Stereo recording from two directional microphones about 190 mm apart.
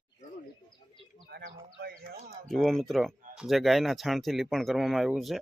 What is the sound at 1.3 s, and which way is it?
Speech, 60° right (ahead or behind).